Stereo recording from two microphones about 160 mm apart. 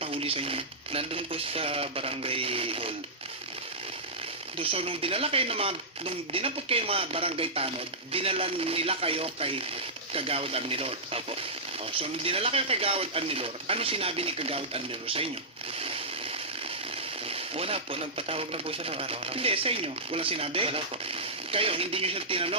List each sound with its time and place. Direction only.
0.0 s speech: 35° right (ahead or behind)
4.5 s speech: 35° right (ahead or behind)
17.2 s speech: 35° right (ahead or behind)